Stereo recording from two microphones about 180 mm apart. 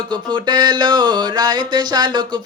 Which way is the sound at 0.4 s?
25° right (ahead or behind).